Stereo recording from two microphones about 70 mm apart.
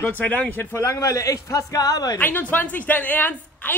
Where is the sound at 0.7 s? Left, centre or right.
Left.